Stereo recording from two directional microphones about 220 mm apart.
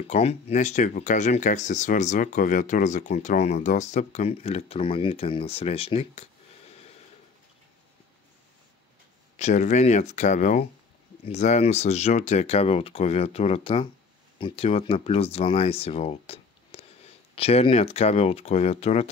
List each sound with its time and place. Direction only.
0.0 s speech: 25° left (ahead or behind)
9.4 s speech: 30° left (ahead or behind)